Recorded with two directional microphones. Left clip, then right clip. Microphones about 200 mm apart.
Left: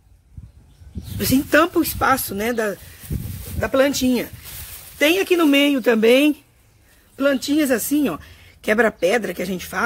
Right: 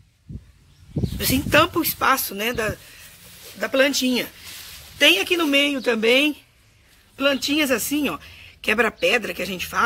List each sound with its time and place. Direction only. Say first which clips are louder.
1.1 s speech: left 1 dB; 35° left (ahead or behind)